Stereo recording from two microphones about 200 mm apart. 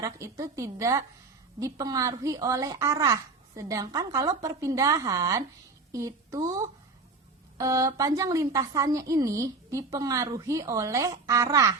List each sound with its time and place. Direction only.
0.0 s a woman's voice: 15° right (ahead or behind)
7.6 s a woman's voice: 15° right (ahead or behind)